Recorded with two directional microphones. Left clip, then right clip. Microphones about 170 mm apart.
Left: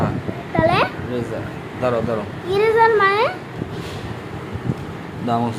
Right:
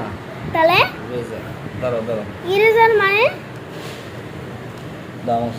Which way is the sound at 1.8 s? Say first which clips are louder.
Left 2 dB; 65° left (ahead or behind).